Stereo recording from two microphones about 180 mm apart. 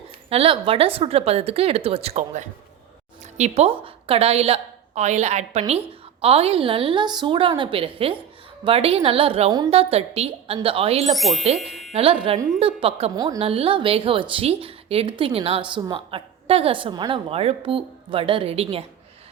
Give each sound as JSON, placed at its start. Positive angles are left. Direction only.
{"t": 0.3, "sound": "a woman's voice", "side_deg": -30}
{"t": 11.1, "sound": "speech", "side_deg": 0}
{"t": 12.5, "sound": "a woman's voice", "side_deg": -35}
{"t": 13.1, "sound": "a woman's voice", "side_deg": -20}
{"t": 13.4, "sound": "a woman's voice", "side_deg": -35}